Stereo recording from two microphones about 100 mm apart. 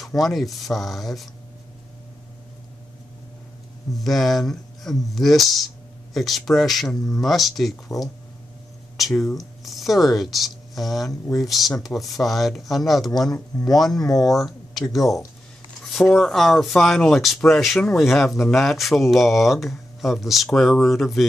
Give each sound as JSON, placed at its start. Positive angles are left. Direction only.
{"t": 0.2, "sound": "speech", "side_deg": 0}
{"t": 4.0, "sound": "speech", "side_deg": 0}
{"t": 8.9, "sound": "speech", "side_deg": 0}
{"t": 13.3, "sound": "speech", "side_deg": 40}
{"t": 14.3, "sound": "speech", "side_deg": 0}